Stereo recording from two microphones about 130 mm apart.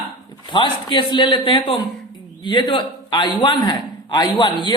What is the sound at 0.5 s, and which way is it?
A woman's voice, 40° left (ahead or behind).